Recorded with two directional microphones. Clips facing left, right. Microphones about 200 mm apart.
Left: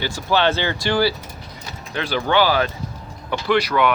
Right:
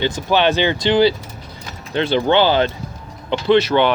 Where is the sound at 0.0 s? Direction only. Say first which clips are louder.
Right 3 dB; 20° right (ahead or behind).